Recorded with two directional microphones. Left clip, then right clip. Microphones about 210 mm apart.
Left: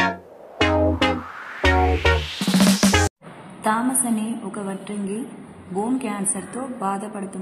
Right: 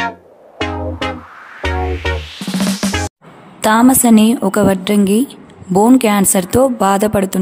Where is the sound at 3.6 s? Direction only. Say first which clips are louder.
Right 11 dB; 55° right (ahead or behind).